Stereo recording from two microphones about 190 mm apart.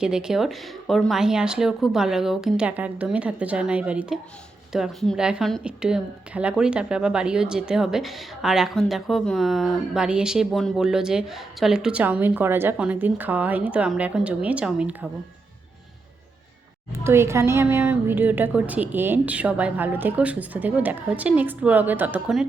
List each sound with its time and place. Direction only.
0.0 s speech: 5° right (ahead or behind)
16.9 s speech: 15° right (ahead or behind)